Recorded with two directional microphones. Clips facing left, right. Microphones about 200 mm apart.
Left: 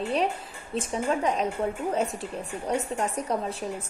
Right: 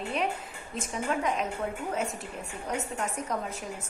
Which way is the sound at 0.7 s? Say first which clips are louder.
Left 4 dB; 30° left (ahead or behind).